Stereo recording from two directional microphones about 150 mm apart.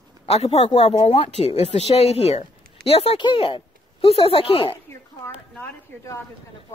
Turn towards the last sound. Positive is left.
turn(degrees=10)  # may be behind; listen again after turning